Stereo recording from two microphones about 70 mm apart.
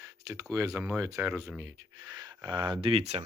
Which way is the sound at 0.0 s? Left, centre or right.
Right.